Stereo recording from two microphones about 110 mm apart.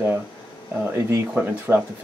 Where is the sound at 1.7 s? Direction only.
20° right (ahead or behind).